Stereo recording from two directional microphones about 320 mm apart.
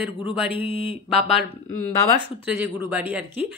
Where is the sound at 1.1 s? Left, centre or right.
Centre.